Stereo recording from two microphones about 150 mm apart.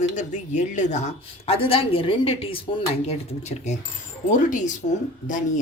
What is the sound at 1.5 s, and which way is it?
A woman's voice, 40° left (ahead or behind).